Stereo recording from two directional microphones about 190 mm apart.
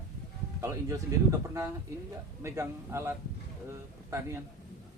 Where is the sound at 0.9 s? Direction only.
15° right (ahead or behind).